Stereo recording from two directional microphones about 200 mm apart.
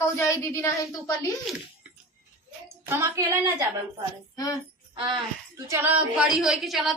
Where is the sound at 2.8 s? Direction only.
15° right (ahead or behind).